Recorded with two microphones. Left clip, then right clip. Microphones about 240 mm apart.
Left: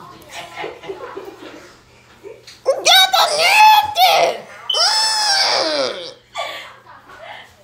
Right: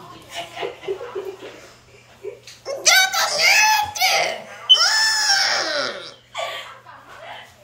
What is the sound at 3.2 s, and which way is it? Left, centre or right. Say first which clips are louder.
Screaming: left 4 dB; centre.